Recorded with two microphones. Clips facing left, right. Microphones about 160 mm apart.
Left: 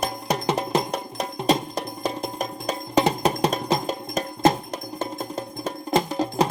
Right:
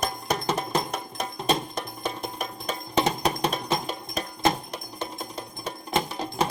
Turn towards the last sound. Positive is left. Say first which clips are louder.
# left 5 dB
turn(degrees=40)  # may be behind; listen again after turning